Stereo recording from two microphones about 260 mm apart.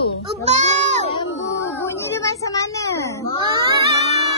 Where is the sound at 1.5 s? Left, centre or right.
Centre.